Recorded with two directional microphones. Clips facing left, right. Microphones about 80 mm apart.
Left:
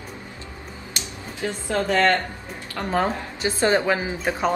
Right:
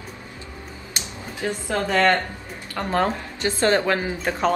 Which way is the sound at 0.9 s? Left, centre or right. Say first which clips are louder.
Right 2 dB; right.